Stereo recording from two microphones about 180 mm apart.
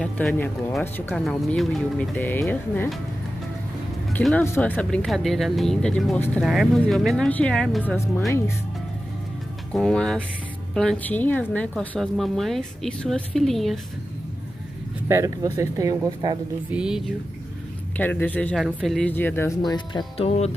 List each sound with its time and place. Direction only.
0.0 s speech: 5° left (ahead or behind)
4.2 s a woman's voice: centre (ahead or behind)
6.4 s a woman's voice: centre (ahead or behind)
9.7 s a woman's voice: 5° left (ahead or behind)
15.0 s speech: 15° right (ahead or behind)
16.7 s a woman's voice: 5° right (ahead or behind)
17.9 s speech: 10° left (ahead or behind); by 20.5 s 35° left (ahead or behind)